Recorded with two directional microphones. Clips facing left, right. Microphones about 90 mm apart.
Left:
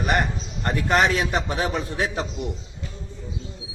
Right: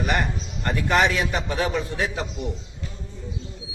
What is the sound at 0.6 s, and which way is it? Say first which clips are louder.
A man's voice: even; 40° left (ahead or behind).